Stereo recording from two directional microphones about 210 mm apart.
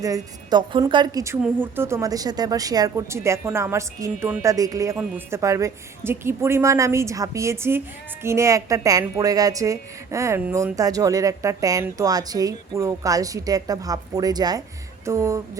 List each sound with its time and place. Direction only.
0.0 s a woman's voice: 20° right (ahead or behind)